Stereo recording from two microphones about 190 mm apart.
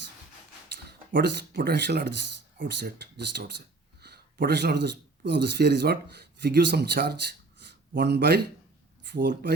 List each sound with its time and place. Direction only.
0.9 s speech: 60° right (ahead or behind)